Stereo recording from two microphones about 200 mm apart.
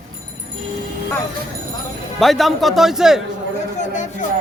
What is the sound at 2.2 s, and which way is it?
Speech, centre (ahead or behind).